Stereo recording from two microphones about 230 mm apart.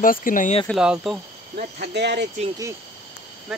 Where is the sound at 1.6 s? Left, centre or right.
Right.